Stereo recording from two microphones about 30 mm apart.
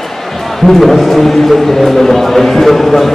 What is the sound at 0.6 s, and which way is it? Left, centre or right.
A man's voice, centre.